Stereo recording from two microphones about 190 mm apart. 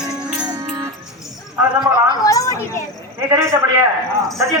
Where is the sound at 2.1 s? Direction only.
20° left (ahead or behind).